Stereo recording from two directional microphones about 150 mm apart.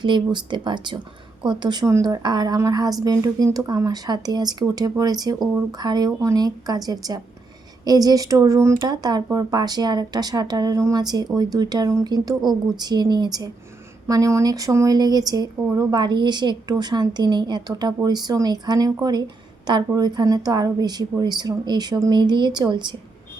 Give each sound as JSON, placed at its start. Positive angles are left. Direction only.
{"t": 0.0, "sound": "speech", "side_deg": -30}